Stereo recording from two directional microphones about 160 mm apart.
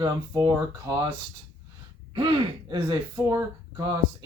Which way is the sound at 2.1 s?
30° right (ahead or behind).